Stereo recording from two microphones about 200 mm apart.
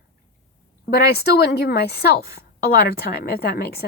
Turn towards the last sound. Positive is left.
turn(degrees=50)  # may be behind; listen again after turning